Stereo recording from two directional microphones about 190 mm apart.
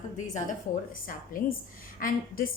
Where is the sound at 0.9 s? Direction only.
45° left (ahead or behind).